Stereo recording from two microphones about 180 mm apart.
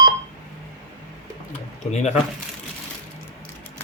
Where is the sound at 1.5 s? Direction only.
40° left (ahead or behind).